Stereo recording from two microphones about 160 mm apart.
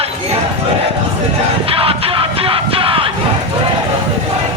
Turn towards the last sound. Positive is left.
turn(degrees=-35)  # may be behind; listen again after turning